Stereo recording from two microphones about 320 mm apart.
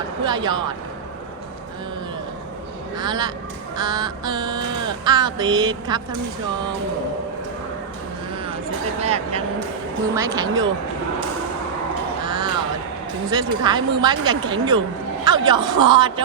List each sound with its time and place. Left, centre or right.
0.3 s speech: centre
3.0 s speech: centre
9.0 s speech: centre
12.2 s crow: centre
13.3 s speech: centre